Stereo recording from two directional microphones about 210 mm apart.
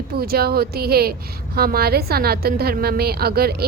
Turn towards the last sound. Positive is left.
turn(degrees=-45)  # may be behind; listen again after turning